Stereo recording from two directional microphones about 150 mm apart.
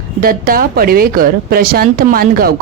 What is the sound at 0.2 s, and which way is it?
Speech, 75° right (ahead or behind).